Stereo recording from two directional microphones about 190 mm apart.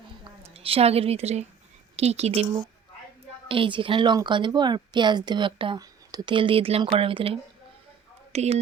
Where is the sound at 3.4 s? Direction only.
30° right (ahead or behind).